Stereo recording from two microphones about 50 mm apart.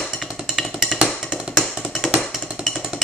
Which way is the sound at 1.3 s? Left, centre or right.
Centre.